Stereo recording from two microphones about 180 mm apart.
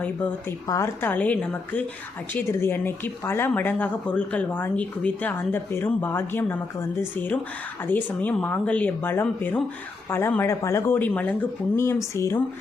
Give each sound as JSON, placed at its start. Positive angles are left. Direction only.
{"t": 0.7, "sound": "speech", "side_deg": 15}